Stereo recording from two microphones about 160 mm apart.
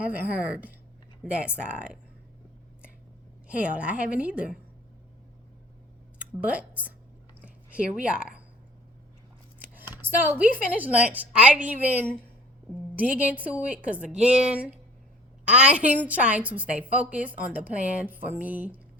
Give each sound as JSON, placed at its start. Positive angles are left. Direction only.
{"t": 0.1, "sound": "a woman's voice", "side_deg": -10}
{"t": 3.5, "sound": "a woman's voice", "side_deg": -10}
{"t": 6.4, "sound": "a woman's voice", "side_deg": -10}
{"t": 9.6, "sound": "a woman's voice", "side_deg": -10}